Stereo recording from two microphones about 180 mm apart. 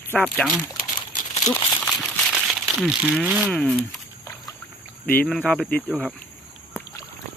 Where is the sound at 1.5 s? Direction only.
5° left (ahead or behind).